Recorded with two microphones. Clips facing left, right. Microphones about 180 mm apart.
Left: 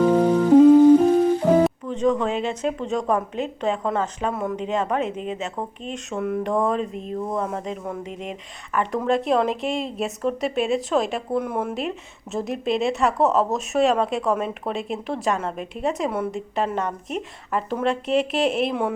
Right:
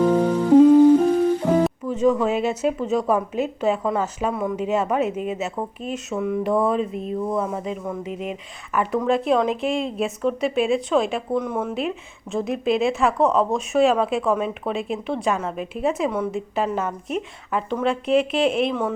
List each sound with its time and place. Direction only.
0.1 s music: 10° left (ahead or behind)
1.5 s speech: centre (ahead or behind)